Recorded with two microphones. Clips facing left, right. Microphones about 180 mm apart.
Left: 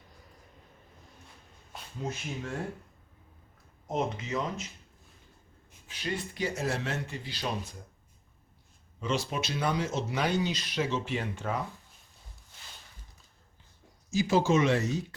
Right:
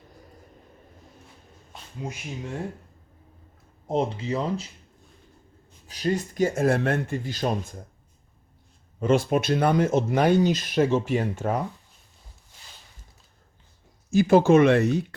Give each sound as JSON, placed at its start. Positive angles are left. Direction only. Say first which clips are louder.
{"t": 2.0, "sound": "speech", "louder": "right 1 dB", "side_deg": -10}
{"t": 3.8, "sound": "speech", "louder": "right 6 dB", "side_deg": -30}
{"t": 5.9, "sound": "speech", "louder": "right 9 dB", "side_deg": -40}
{"t": 9.0, "sound": "speech", "louder": "right 10 dB", "side_deg": -50}
{"t": 14.1, "sound": "speech", "louder": "right 8 dB", "side_deg": -55}